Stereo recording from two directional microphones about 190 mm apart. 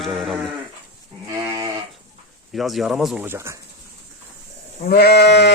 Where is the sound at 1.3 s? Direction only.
20° right (ahead or behind).